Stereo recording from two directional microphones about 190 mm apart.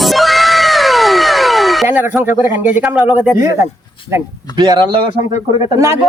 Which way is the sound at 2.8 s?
10° right (ahead or behind).